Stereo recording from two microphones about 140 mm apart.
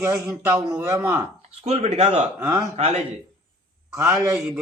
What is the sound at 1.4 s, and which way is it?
Speech, 45° right (ahead or behind).